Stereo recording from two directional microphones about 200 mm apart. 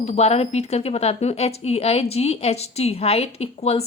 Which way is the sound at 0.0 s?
35° left (ahead or behind).